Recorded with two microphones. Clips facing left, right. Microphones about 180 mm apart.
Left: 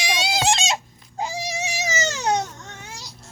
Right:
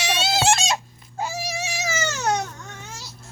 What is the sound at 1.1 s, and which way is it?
Baby cry, 15° left (ahead or behind).